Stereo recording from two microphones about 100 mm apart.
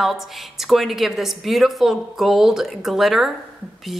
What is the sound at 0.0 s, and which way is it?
A woman's voice, centre (ahead or behind).